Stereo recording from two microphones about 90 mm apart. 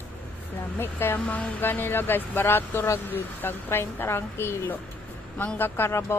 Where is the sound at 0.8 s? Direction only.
25° left (ahead or behind).